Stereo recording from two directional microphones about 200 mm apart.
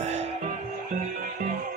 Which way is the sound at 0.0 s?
35° right (ahead or behind).